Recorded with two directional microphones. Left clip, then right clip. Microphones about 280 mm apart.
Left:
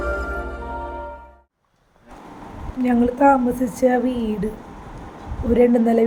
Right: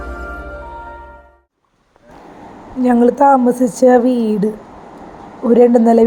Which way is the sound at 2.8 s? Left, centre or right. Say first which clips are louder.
Right 6 dB; centre.